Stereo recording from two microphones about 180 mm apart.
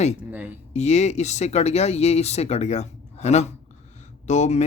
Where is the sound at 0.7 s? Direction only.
40° left (ahead or behind).